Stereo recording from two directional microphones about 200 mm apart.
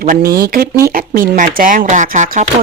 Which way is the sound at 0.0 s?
45° right (ahead or behind).